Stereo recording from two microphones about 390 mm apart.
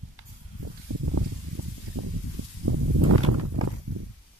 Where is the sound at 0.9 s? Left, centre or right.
Right.